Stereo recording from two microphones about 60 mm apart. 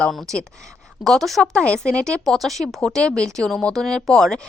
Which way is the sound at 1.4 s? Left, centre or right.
Centre.